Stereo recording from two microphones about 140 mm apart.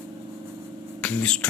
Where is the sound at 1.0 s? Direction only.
5° left (ahead or behind).